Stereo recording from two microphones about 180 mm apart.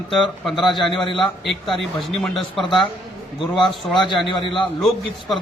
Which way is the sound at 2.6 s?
25° left (ahead or behind).